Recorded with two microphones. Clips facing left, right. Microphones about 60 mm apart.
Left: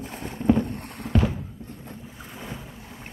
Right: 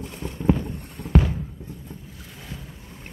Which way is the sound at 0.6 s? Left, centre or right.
Left.